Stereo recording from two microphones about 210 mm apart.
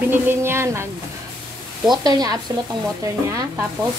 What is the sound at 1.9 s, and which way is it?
A woman's voice, 20° right (ahead or behind).